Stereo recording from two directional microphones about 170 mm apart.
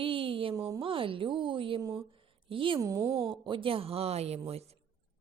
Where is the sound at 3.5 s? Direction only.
30° right (ahead or behind).